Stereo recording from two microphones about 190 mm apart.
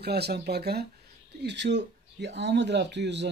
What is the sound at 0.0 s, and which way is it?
Speech, 60° right (ahead or behind).